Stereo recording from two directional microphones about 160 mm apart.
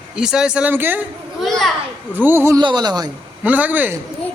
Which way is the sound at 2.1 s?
10° right (ahead or behind).